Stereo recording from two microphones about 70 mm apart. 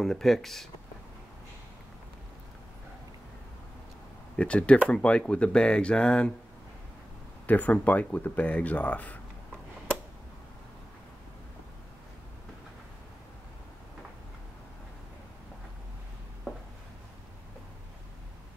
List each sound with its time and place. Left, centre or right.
0.0 s speech: centre
4.4 s speech: centre
7.4 s speech: left